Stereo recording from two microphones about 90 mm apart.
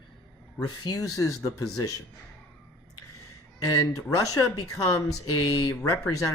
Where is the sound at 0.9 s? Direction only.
40° left (ahead or behind).